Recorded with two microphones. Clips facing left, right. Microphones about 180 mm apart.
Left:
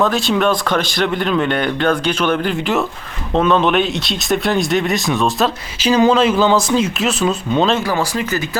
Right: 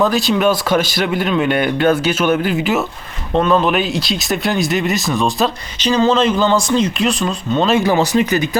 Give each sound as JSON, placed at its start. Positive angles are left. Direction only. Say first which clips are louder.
{"t": 0.0, "sound": "speech", "louder": "right 1 dB", "side_deg": 0}
{"t": 7.9, "sound": "speech", "louder": "right 5 dB", "side_deg": -20}